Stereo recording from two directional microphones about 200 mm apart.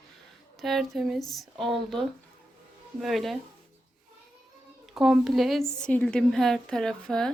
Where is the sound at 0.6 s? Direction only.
Centre (ahead or behind).